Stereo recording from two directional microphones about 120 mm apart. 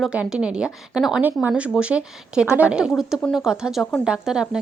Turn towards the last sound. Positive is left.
turn(degrees=-5)  # may be behind; listen again after turning